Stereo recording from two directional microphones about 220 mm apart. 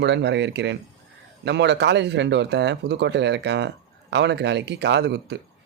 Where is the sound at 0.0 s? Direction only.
50° right (ahead or behind).